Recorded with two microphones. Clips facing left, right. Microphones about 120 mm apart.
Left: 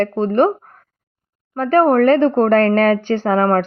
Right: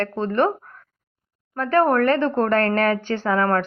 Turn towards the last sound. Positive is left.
turn(degrees=25)  # may be behind; listen again after turning